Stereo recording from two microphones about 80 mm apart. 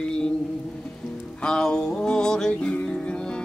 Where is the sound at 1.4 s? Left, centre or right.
Centre.